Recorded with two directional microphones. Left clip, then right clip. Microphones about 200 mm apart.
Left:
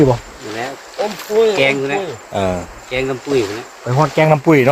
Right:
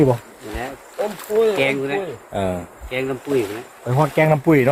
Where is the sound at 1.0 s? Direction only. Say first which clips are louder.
Left 4 dB; 15° right (ahead or behind).